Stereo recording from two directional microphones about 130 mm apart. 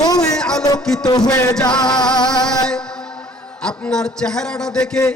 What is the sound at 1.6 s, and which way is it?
Music, 35° left (ahead or behind).